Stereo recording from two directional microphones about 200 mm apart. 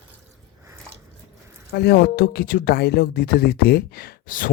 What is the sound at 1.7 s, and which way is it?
Speech, 55° left (ahead or behind).